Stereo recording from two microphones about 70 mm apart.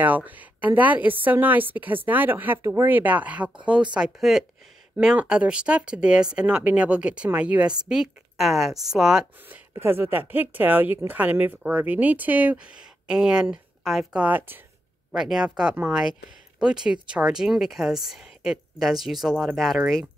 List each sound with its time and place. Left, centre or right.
0.0 s a woman's voice: right
4.2 s speech: centre
9.5 s a woman's voice: right; by 14.0 s centre
14.1 s a woman's voice: right
15.1 s speech: centre